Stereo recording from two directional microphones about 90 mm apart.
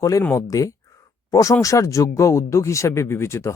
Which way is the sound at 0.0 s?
40° left (ahead or behind).